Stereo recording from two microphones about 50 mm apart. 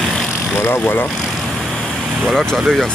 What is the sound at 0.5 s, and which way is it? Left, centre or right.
Speech, left.